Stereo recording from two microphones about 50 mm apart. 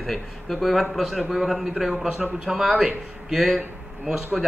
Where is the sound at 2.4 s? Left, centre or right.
Centre.